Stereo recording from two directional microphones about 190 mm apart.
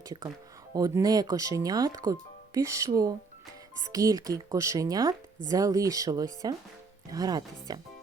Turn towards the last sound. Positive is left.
turn(degrees=-20)  # may be behind; listen again after turning